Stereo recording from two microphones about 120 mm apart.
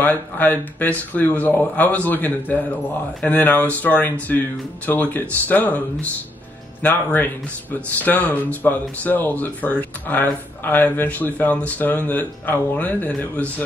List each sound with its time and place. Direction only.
0.0 s speech: 15° left (ahead or behind)